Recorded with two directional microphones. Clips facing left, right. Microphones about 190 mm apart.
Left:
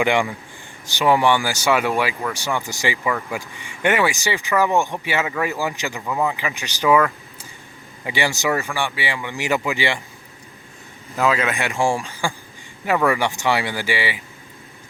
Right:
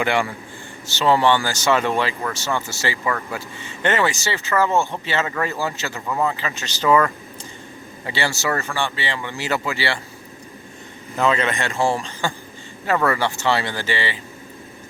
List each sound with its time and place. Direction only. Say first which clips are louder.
0.0 s speech: left 2 dB; 15° left (ahead or behind)
11.1 s speech: even; 5° left (ahead or behind)